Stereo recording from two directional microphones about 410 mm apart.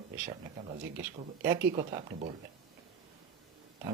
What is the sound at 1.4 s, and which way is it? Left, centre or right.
Speech, centre.